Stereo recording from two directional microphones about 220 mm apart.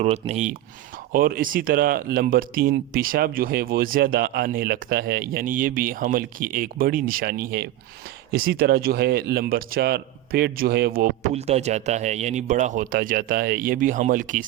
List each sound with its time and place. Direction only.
0.0 s speech: 30° right (ahead or behind)
1.1 s speech: 40° right (ahead or behind)